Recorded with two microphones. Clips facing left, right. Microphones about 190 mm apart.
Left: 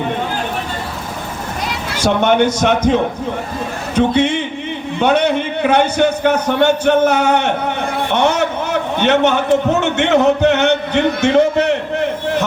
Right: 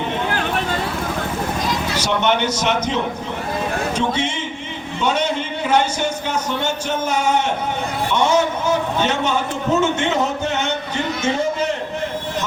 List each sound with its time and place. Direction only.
2.0 s a man's voice: 50° left (ahead or behind)